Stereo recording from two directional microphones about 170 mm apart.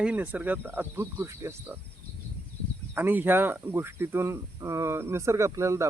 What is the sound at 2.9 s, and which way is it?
Speech, 10° right (ahead or behind).